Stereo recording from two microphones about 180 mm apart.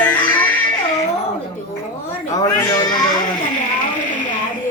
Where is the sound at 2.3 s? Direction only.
20° left (ahead or behind).